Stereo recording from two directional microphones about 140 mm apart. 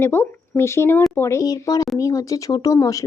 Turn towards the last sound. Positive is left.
turn(degrees=25)  # may be behind; listen again after turning